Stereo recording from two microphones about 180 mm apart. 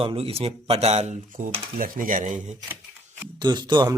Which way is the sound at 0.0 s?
30° right (ahead or behind).